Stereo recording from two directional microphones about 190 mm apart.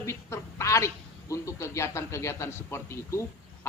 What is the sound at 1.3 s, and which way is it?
A man's voice, 15° left (ahead or behind).